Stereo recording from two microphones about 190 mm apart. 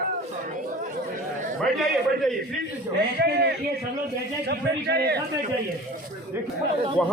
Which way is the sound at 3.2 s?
60° right (ahead or behind).